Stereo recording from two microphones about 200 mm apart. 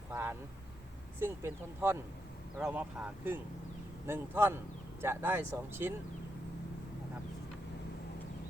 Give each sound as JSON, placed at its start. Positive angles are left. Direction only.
{"t": 0.1, "sound": "vehicle", "side_deg": -10}
{"t": 1.2, "sound": "speech", "side_deg": -10}